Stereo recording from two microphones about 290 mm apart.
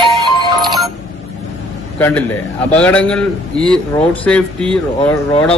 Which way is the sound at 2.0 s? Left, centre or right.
Centre.